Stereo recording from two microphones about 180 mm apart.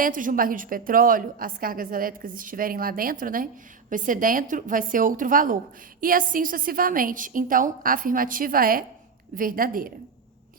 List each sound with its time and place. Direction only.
0.0 s a woman's voice: 50° right (ahead or behind)